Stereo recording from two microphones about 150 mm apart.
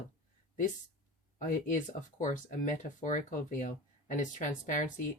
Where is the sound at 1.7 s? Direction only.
60° left (ahead or behind).